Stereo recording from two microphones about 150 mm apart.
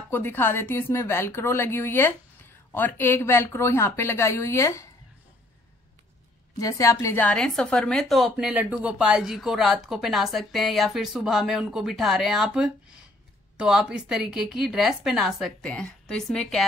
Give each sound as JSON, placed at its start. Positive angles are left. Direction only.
{"t": 0.1, "sound": "speech", "side_deg": 15}
{"t": 6.6, "sound": "a woman's voice", "side_deg": 20}